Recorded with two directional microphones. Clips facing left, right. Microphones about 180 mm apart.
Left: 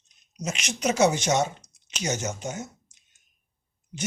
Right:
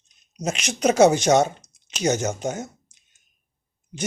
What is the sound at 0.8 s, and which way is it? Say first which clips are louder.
Speech: right 6 dB; 55° right (ahead or behind).